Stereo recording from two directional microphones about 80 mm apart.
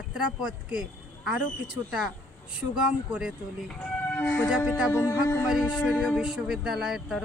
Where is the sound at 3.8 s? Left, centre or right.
Left.